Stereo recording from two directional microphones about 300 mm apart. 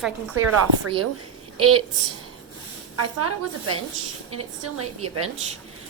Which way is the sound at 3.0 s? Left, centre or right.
Right.